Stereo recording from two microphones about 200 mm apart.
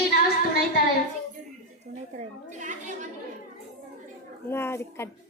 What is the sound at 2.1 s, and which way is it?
Speech, 40° right (ahead or behind).